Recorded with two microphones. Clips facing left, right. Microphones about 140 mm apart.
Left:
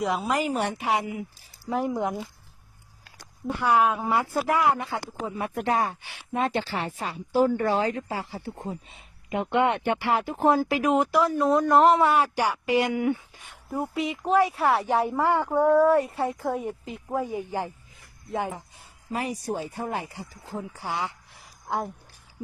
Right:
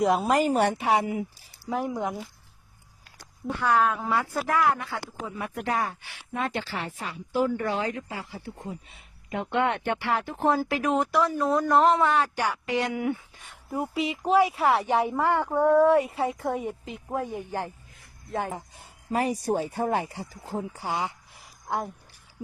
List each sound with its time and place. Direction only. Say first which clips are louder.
0.0 s a woman's voice: right 4 dB; 45° right (ahead or behind)
0.8 s speech: right 3 dB; 30° right (ahead or behind)
1.7 s speech: left 2 dB; 10° left (ahead or behind)
3.6 s speech: left 2 dB; 15° left (ahead or behind); by 9.0 s 35° left (ahead or behind)
9.3 s speech: left 3 dB; 15° left (ahead or behind)
12.1 s speech: left 2 dB; 10° left (ahead or behind)
15.2 s speech: left 1 dB; 10° left (ahead or behind)
18.3 s speech: left 1 dB; 15° left (ahead or behind)
18.5 s speech: right 3 dB; 40° right (ahead or behind); by 21.2 s 20° right (ahead or behind)